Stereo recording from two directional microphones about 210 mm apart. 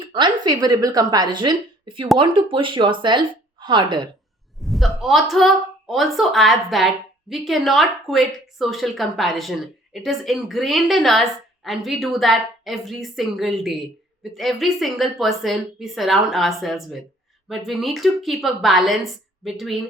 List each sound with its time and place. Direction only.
0.0 s speech: 20° right (ahead or behind)
4.6 s speech: centre (ahead or behind)